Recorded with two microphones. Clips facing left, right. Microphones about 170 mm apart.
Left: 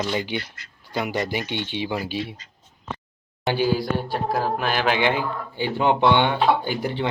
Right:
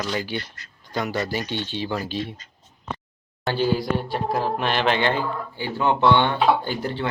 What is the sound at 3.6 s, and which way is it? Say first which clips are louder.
Speech: even; centre (ahead or behind).